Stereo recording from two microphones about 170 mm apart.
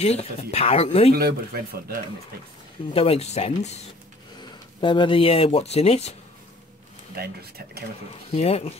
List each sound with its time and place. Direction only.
0.0 s speech: 40° left (ahead or behind)
1.1 s speech: 65° right (ahead or behind)
2.9 s speech: 35° left (ahead or behind)
4.4 s speech: 30° left (ahead or behind)
7.2 s speech: 65° right (ahead or behind)
8.4 s speech: 35° left (ahead or behind)